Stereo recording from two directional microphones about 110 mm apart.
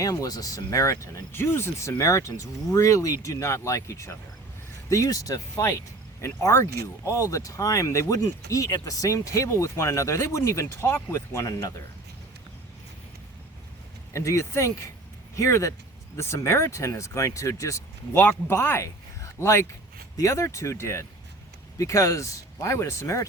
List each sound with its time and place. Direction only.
0.0 s speech: 30° left (ahead or behind)
14.1 s speech: 25° left (ahead or behind)
18.1 s speech: 15° left (ahead or behind)